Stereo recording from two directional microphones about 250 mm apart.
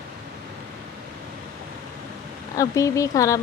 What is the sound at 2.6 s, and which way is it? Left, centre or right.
Speech, centre.